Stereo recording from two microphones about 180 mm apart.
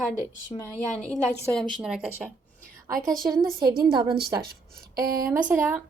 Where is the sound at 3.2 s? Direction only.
20° right (ahead or behind).